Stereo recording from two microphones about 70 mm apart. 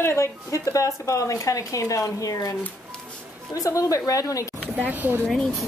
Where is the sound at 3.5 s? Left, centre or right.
Left.